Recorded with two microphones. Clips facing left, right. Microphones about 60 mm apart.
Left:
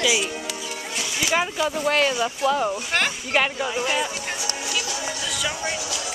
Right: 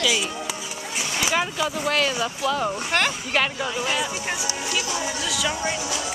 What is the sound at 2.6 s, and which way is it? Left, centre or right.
Speech, centre.